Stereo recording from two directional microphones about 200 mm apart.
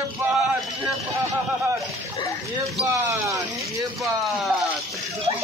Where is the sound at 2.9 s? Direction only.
15° right (ahead or behind).